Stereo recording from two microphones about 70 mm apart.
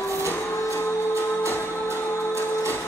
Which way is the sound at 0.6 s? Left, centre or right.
Right.